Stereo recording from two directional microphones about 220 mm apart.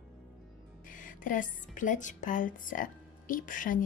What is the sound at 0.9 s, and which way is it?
Speech, 35° left (ahead or behind).